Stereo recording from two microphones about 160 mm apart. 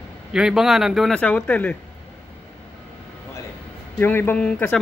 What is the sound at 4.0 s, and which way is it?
Speech, 15° left (ahead or behind).